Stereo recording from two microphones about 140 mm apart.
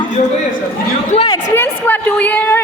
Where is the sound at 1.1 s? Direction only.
50° left (ahead or behind).